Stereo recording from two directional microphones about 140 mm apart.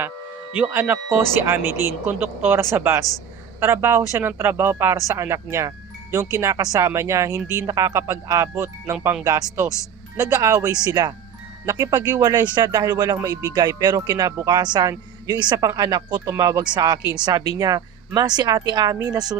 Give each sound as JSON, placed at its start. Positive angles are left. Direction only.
{"t": 0.5, "sound": "speech", "side_deg": -10}